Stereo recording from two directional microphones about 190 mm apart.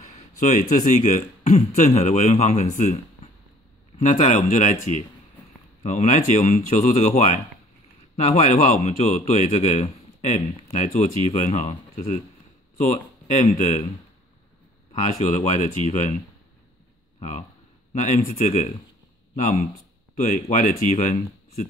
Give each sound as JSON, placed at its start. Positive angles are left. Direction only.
{"t": 0.0, "sound": "speech", "side_deg": 40}
{"t": 4.0, "sound": "speech", "side_deg": 40}
{"t": 5.8, "sound": "speech", "side_deg": 40}
{"t": 15.0, "sound": "speech", "side_deg": 40}
{"t": 17.9, "sound": "speech", "side_deg": 35}